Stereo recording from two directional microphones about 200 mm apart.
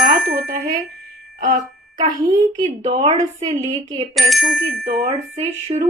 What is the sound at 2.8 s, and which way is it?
A woman's voice, 30° right (ahead or behind).